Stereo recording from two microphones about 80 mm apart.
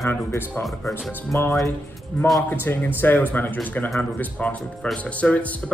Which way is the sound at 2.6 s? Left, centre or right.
Left.